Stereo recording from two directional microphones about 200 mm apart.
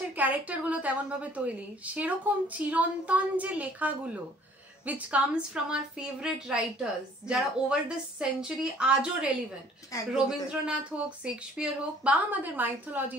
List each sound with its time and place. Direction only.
0.1 s a woman's voice: 10° right (ahead or behind)
9.9 s speech: 15° left (ahead or behind)
10.5 s a woman's voice: 5° right (ahead or behind)